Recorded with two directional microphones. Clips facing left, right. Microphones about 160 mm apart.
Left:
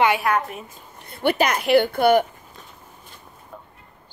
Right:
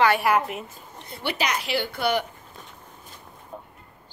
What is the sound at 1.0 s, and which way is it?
A woman's voice, 55° left (ahead or behind).